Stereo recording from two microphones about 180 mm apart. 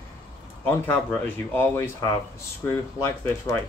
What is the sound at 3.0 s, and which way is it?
Speech, 15° left (ahead or behind).